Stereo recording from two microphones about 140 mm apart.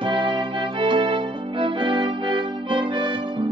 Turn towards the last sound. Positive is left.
turn(degrees=-35)  # may be behind; listen again after turning